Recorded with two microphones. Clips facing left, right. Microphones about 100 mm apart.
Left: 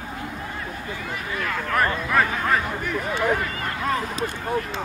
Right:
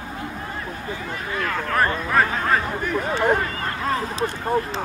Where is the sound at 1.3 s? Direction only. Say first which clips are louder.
Right 2 dB; 40° right (ahead or behind).